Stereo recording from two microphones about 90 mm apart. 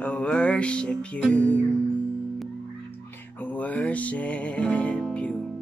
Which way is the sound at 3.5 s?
15° left (ahead or behind).